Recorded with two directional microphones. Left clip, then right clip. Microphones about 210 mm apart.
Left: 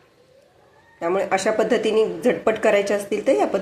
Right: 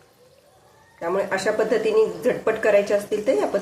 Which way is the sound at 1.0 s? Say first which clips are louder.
Left 2 dB; 20° left (ahead or behind).